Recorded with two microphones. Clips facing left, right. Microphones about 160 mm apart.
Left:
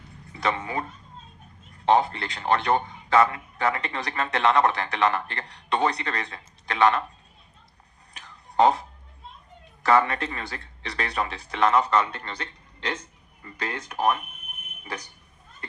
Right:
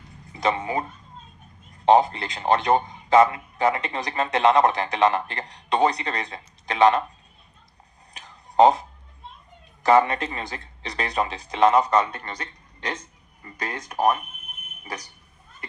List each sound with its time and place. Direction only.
0.3 s a man's voice: 20° right (ahead or behind)
1.9 s a man's voice: 20° right (ahead or behind)
8.2 s a sound: 20° right (ahead or behind)
9.8 s a man's voice: 20° right (ahead or behind)